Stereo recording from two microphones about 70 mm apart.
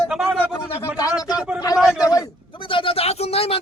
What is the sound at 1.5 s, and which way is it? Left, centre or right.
Speech, left.